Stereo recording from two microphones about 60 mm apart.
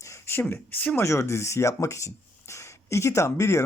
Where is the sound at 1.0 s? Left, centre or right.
Left.